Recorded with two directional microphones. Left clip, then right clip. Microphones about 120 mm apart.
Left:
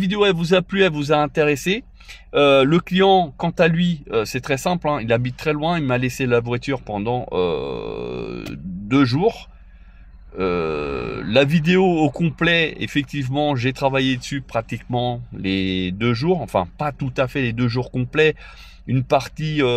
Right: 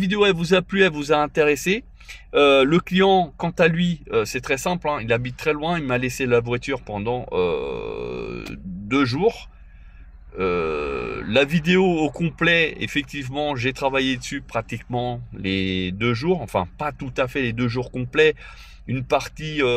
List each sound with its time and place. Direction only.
0.1 s speech: 20° left (ahead or behind)
7.0 s speech: 40° left (ahead or behind)
10.3 s speech: 30° left (ahead or behind)
11.8 s speech: 60° left (ahead or behind)
12.2 s speech: 30° left (ahead or behind)